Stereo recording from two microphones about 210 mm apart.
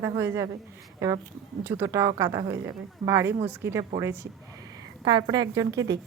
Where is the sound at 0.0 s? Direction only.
15° right (ahead or behind).